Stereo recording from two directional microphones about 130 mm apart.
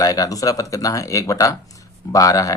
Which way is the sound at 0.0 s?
25° left (ahead or behind).